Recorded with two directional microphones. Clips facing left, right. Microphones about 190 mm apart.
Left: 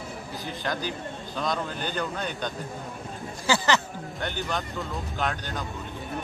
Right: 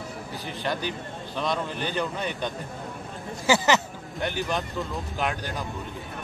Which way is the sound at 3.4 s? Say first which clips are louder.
Right 3 dB; 20° right (ahead or behind).